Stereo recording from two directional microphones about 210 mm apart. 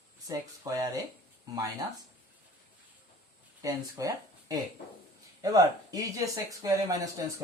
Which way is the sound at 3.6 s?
15° right (ahead or behind).